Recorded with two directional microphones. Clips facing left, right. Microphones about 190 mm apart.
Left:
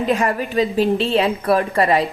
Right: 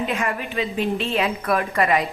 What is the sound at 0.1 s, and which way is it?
A woman's voice, 35° left (ahead or behind).